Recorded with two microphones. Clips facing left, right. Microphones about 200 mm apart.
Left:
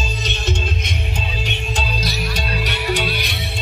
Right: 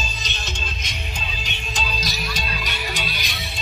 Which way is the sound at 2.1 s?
65° left (ahead or behind).